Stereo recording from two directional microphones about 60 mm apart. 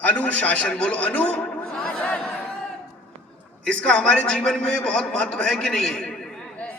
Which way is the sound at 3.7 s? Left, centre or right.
Centre.